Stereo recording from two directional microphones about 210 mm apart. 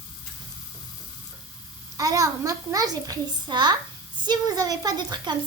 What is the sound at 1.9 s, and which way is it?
A child's voice, 15° right (ahead or behind).